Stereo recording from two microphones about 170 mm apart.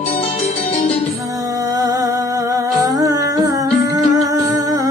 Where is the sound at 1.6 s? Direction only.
20° right (ahead or behind).